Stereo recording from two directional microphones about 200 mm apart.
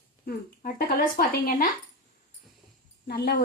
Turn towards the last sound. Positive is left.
turn(degrees=55)  # may be behind; listen again after turning